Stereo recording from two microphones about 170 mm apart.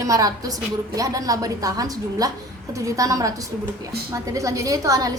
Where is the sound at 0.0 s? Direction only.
20° right (ahead or behind).